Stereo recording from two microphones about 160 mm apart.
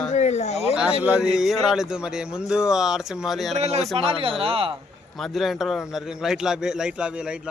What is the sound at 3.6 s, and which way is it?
Speech, 40° right (ahead or behind).